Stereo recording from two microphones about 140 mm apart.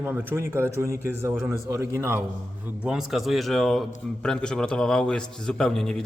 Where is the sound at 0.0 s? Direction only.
15° right (ahead or behind).